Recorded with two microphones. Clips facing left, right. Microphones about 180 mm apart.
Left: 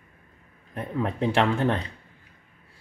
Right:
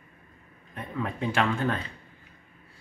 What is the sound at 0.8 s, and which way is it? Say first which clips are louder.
Speech: left 5 dB; 30° left (ahead or behind).